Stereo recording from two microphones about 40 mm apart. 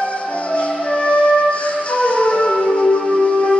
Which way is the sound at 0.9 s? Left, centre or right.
Left.